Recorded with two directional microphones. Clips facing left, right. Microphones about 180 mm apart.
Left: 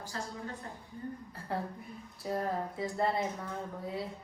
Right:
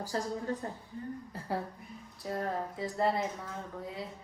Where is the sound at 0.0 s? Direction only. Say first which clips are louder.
Right 6 dB; 35° right (ahead or behind).